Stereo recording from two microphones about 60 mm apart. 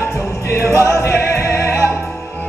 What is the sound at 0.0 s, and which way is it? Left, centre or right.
Music, left.